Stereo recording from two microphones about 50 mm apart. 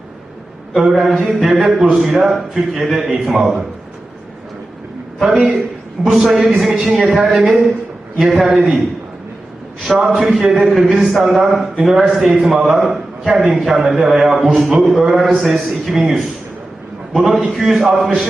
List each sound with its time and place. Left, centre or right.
0.8 s a man's voice: centre
5.2 s a man's voice: centre
10.0 s a man's voice: centre